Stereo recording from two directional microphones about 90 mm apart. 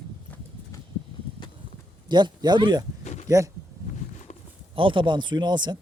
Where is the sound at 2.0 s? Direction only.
55° right (ahead or behind).